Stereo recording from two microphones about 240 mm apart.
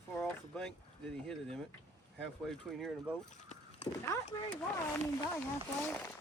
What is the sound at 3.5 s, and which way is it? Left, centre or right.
Speech, left.